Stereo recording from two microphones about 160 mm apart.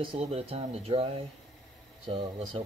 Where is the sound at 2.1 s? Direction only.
40° right (ahead or behind).